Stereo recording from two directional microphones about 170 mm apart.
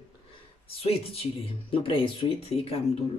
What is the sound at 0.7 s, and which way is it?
Speech, 35° left (ahead or behind).